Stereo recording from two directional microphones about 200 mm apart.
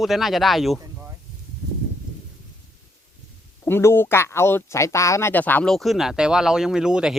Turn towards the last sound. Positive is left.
turn(degrees=-5)  # may be behind; listen again after turning